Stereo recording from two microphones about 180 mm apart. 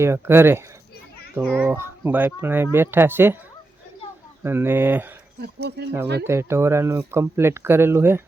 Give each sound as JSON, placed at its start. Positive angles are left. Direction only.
{"t": 0.0, "sound": "speech", "side_deg": -15}
{"t": 4.4, "sound": "speech", "side_deg": -10}
{"t": 5.4, "sound": "speech", "side_deg": -65}
{"t": 6.2, "sound": "speech", "side_deg": -15}